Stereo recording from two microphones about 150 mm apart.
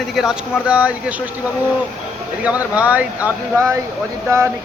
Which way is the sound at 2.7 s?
10° right (ahead or behind).